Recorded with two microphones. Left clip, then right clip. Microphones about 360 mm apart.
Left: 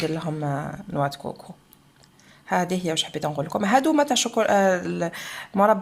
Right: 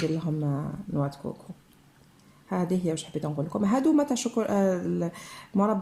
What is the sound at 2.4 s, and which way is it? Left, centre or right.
Speech, left.